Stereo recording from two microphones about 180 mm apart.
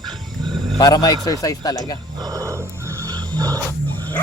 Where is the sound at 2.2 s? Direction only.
20° right (ahead or behind).